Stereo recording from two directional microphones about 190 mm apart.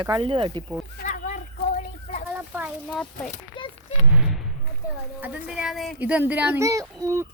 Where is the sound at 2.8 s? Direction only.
5° left (ahead or behind).